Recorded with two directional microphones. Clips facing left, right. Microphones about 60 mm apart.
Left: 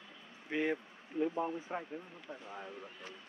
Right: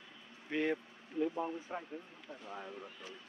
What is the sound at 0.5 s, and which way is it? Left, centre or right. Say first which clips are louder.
Speech: even; centre.